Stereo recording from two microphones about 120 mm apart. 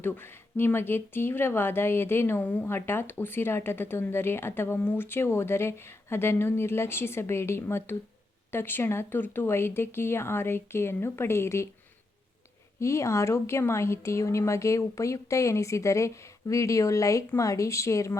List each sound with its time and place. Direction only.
0.0 s speech: 20° left (ahead or behind)
12.8 s speech: 25° left (ahead or behind)